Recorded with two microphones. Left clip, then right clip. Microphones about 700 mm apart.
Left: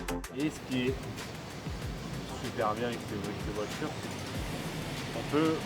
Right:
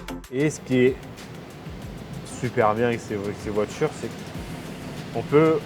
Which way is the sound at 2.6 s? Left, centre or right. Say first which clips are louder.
Right 11 dB; right.